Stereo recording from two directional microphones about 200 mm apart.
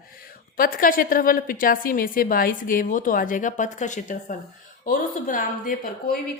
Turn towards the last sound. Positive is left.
turn(degrees=40)  # may be behind; listen again after turning